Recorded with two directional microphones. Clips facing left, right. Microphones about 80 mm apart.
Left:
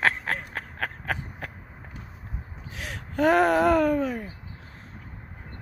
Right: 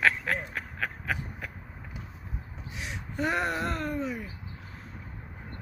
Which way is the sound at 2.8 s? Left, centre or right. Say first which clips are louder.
Left 8 dB; left.